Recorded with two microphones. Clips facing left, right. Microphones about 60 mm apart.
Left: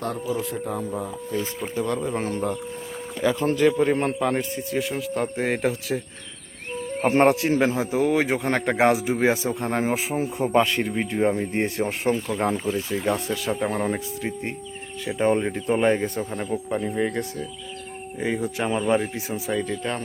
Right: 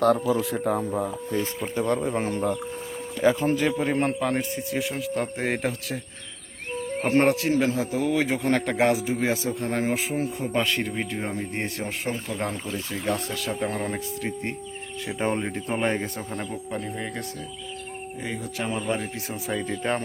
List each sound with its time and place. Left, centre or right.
0.0 s speech: right
0.5 s speech: right
2.0 s speech: centre
3.4 s a man's voice: centre
7.0 s speech: centre
7.3 s a man's voice: left
9.8 s speech: centre
10.8 s speech: centre
11.1 s a man's voice: centre
16.7 s a man's voice: centre
19.3 s a man's voice: centre